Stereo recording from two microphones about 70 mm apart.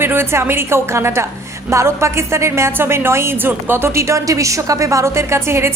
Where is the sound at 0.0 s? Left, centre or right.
Right.